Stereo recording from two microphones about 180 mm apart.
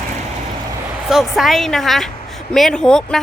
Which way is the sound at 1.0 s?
Centre (ahead or behind).